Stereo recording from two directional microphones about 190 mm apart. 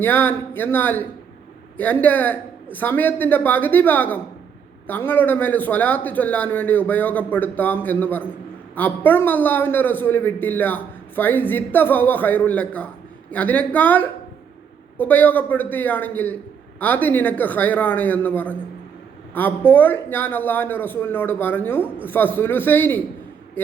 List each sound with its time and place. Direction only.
0.0 s a man's voice: 10° left (ahead or behind)